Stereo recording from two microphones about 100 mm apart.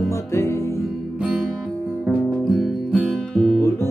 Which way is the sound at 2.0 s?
Centre (ahead or behind).